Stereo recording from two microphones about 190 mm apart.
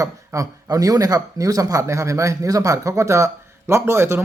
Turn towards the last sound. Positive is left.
turn(degrees=-15)  # may be behind; listen again after turning